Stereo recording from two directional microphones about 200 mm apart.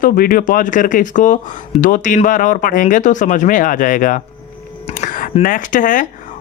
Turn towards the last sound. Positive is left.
turn(degrees=40)  # may be behind; listen again after turning